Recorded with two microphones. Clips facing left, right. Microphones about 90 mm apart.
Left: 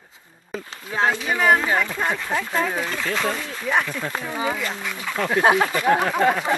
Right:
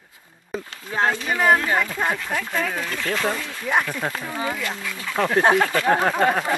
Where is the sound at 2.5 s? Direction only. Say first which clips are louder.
Left 2 dB; 15° left (ahead or behind).